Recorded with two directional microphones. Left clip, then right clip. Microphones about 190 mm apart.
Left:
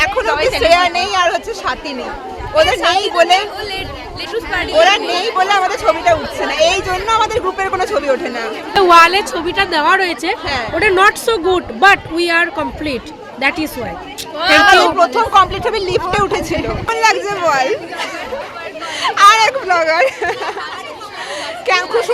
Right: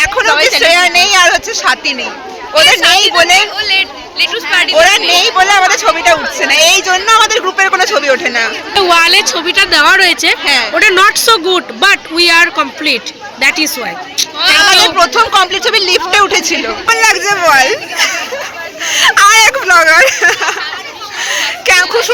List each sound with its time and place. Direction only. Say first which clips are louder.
0.0 s a sound: right 5 dB; centre (ahead or behind)
0.6 s a woman's voice: right 4 dB; centre (ahead or behind)
3.6 s speech: right 11 dB; 25° left (ahead or behind)
4.8 s a woman's voice: right 3 dB; centre (ahead or behind)
8.9 s a woman's voice: even; 35° left (ahead or behind)
9.5 s speech: right 5 dB; 15° left (ahead or behind)
10.4 s a woman's voice: right 9 dB; centre (ahead or behind)
10.8 s speech: right 2 dB; 10° left (ahead or behind)
14.9 s a woman's voice: right 3 dB; centre (ahead or behind)
21.2 s a sound: right 10 dB; 5° left (ahead or behind)